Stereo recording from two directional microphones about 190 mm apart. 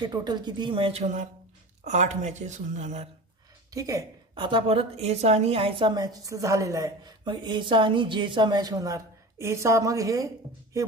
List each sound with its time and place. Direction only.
0.0 s a woman's voice: 20° right (ahead or behind); by 3.1 s 40° right (ahead or behind)
3.7 s a woman's voice: 15° right (ahead or behind)